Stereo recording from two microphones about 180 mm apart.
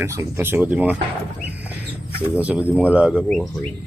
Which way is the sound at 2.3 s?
5° right (ahead or behind).